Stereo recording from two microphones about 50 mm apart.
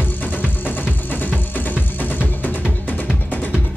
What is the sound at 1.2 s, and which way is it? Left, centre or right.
Music, left.